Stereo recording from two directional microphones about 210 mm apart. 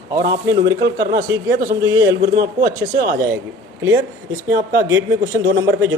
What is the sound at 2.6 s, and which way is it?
Speech, 40° right (ahead or behind).